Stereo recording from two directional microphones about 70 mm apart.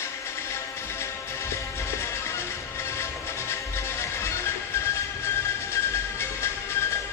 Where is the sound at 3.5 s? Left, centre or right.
Left.